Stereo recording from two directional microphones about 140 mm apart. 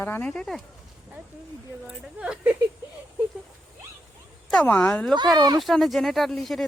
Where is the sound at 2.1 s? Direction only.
5° right (ahead or behind).